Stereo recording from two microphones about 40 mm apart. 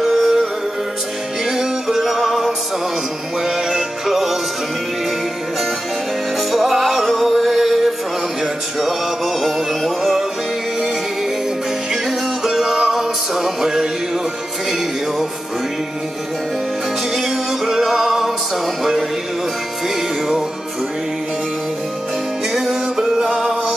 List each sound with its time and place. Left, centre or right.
0.0 s music: centre
6.5 s music: centre
12.4 s music: centre
17.1 s music: centre
22.5 s music: centre